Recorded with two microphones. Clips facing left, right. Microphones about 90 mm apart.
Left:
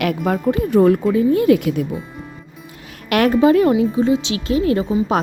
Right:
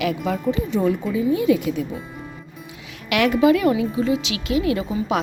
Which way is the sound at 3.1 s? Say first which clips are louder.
Left 3 dB; 40° left (ahead or behind).